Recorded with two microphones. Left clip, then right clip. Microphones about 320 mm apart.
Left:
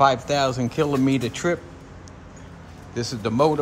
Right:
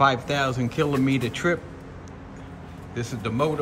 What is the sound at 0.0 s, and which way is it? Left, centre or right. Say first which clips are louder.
A man's voice: left 3 dB; centre.